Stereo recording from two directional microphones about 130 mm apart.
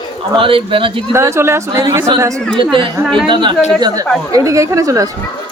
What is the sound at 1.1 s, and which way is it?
Speech, 20° right (ahead or behind).